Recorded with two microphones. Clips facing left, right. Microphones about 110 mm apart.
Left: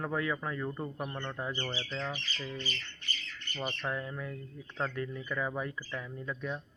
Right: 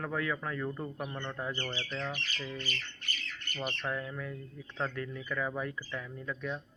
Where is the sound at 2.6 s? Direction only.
55° right (ahead or behind).